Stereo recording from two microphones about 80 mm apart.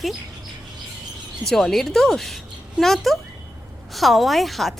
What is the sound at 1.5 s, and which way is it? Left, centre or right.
A woman's voice, centre.